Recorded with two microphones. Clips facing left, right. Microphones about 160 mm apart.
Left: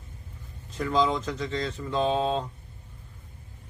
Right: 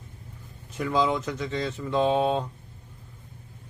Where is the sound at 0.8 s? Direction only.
10° right (ahead or behind).